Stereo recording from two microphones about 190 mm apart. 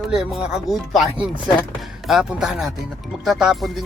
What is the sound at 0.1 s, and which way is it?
Speech, centre (ahead or behind).